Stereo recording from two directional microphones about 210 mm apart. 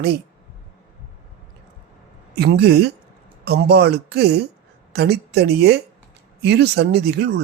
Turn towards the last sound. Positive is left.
turn(degrees=-50)  # may be behind; listen again after turning